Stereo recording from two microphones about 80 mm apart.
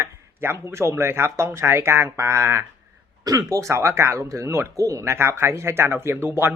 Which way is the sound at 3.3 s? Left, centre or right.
Right.